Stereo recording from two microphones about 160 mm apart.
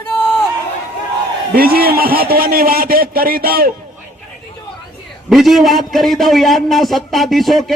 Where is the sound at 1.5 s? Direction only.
70° right (ahead or behind).